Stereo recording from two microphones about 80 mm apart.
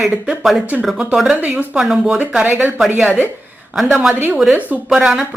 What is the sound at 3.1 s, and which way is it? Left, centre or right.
Speech, right.